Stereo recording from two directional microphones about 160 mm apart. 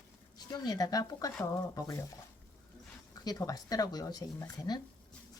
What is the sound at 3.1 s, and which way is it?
Speech, 25° left (ahead or behind).